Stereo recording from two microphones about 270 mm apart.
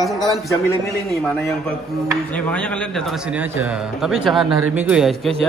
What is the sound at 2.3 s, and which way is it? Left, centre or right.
A man's voice, centre.